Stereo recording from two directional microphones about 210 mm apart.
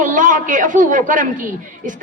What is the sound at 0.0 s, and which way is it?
A woman's voice, 40° right (ahead or behind).